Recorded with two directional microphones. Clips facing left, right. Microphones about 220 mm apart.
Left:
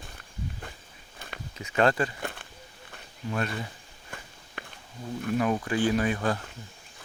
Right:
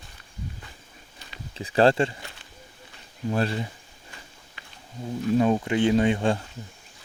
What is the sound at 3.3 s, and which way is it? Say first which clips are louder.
Speech: right 5 dB; 30° right (ahead or behind).